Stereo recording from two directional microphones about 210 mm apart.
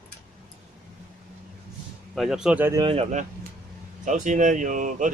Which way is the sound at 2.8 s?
30° right (ahead or behind).